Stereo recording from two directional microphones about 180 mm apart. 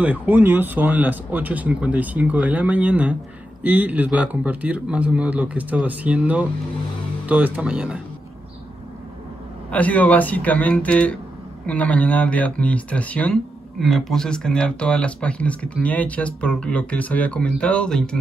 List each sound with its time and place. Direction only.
0.0 s speech: 10° right (ahead or behind)
9.7 s speech: 10° left (ahead or behind)